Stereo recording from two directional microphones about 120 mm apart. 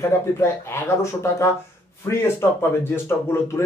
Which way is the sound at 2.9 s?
20° left (ahead or behind).